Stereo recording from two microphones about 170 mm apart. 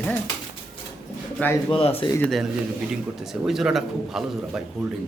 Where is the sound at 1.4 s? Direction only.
10° left (ahead or behind).